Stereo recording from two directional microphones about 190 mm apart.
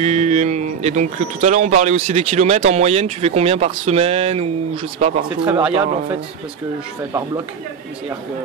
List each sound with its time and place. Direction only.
0.0 s speech: 35° right (ahead or behind)
5.4 s speech: 5° right (ahead or behind)
7.0 s speech: 15° right (ahead or behind)